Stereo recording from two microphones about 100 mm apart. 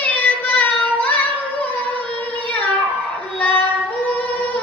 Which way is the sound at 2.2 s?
15° left (ahead or behind).